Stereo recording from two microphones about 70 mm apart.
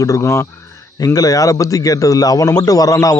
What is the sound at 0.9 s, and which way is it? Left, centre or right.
A man's voice, left.